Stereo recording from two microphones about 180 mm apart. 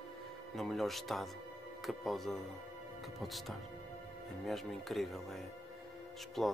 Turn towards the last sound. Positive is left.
turn(degrees=0)  # may be behind; listen again after turning